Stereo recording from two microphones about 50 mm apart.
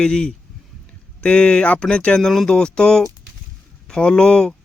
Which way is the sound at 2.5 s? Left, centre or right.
Centre.